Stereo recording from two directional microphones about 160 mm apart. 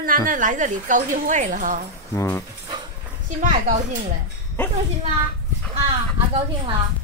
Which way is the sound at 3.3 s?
55° right (ahead or behind).